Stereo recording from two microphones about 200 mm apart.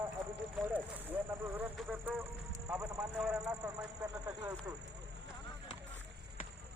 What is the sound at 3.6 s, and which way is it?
Speech, 20° right (ahead or behind).